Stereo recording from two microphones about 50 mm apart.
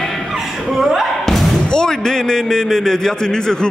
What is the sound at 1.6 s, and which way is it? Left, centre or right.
A man's voice, centre.